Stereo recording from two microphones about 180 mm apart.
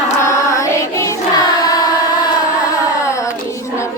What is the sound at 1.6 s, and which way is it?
Carnatic music, 20° left (ahead or behind).